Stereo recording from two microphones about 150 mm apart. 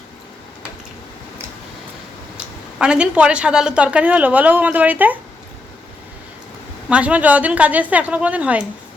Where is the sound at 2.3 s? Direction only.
5° right (ahead or behind).